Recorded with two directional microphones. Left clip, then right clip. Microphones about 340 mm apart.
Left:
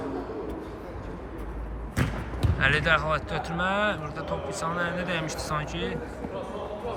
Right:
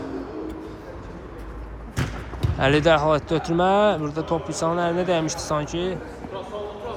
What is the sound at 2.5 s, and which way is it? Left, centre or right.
Speech, centre.